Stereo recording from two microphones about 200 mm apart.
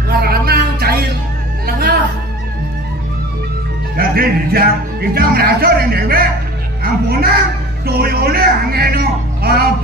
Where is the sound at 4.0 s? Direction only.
50° right (ahead or behind).